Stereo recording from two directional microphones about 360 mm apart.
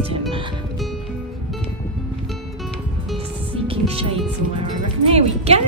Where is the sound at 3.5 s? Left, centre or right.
Centre.